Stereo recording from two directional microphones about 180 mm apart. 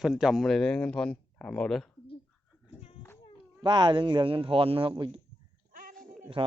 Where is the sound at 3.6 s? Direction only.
25° right (ahead or behind).